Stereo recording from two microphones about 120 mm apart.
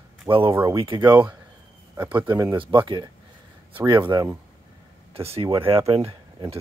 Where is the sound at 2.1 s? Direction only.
40° right (ahead or behind).